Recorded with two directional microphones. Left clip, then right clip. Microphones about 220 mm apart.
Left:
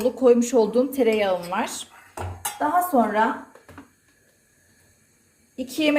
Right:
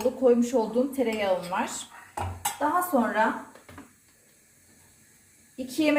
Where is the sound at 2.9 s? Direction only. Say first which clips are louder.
Left 7 dB; 55° left (ahead or behind).